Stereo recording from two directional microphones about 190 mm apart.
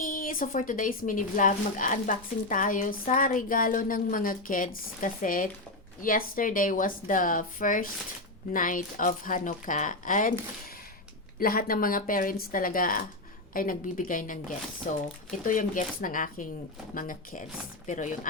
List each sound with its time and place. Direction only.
0.0 s a woman's voice: 45° left (ahead or behind)
11.3 s a woman's voice: 50° left (ahead or behind)